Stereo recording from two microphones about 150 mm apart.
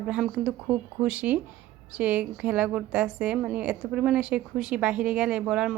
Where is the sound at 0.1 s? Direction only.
Centre (ahead or behind).